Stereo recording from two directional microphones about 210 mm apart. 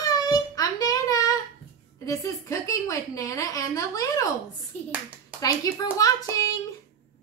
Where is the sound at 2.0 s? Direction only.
15° left (ahead or behind).